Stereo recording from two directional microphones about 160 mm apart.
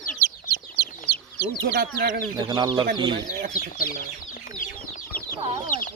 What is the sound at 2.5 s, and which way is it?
Speech, 25° right (ahead or behind).